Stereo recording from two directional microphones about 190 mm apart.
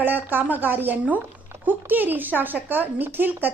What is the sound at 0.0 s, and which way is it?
Speech, 10° right (ahead or behind).